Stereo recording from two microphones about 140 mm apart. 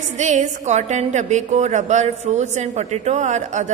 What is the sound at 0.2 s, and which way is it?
A woman's voice, 55° right (ahead or behind).